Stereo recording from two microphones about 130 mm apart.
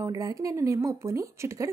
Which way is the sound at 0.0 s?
25° right (ahead or behind).